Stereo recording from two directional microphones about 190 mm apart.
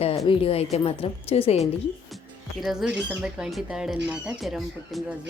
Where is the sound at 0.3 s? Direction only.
30° left (ahead or behind).